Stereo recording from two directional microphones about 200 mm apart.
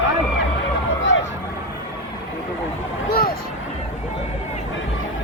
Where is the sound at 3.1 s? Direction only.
50° left (ahead or behind).